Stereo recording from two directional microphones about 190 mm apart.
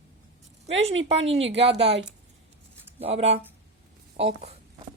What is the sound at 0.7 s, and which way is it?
A woman's voice, 75° right (ahead or behind).